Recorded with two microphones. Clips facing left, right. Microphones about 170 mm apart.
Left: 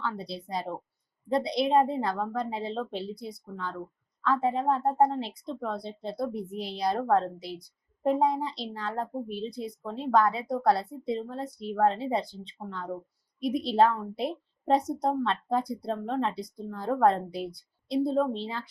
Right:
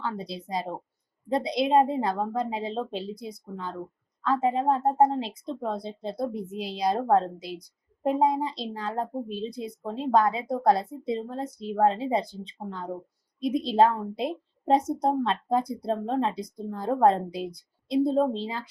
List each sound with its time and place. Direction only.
0.0 s a woman's voice: 20° right (ahead or behind)